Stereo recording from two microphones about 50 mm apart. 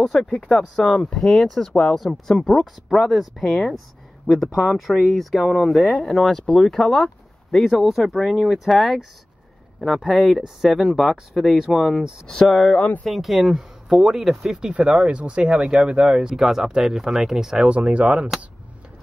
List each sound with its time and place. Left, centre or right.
0.0 s speech: centre
14.7 s speech: right
17.6 s speech: right